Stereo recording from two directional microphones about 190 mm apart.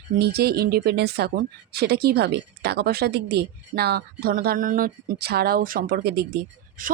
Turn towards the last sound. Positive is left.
turn(degrees=-50)  # may be behind; listen again after turning